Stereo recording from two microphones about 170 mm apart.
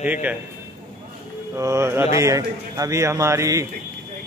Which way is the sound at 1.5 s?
15° right (ahead or behind).